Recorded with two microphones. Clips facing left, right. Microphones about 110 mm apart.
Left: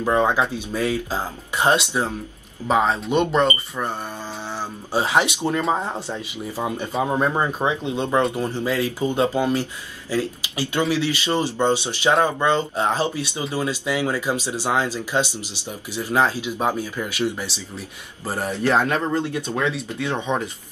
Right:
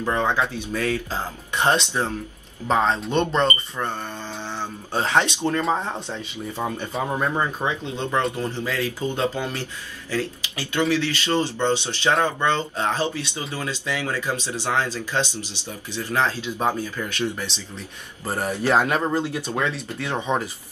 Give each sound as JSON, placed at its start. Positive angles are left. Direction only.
{"t": 0.0, "sound": "speech", "side_deg": 15}
{"t": 18.2, "sound": "speech", "side_deg": 0}
{"t": 18.5, "sound": "speech", "side_deg": -15}